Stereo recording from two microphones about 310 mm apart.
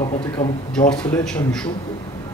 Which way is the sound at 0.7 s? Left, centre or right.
Centre.